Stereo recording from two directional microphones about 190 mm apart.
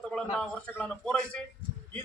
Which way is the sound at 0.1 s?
5° left (ahead or behind).